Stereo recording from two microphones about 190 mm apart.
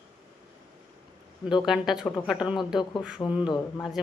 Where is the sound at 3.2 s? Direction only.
15° left (ahead or behind).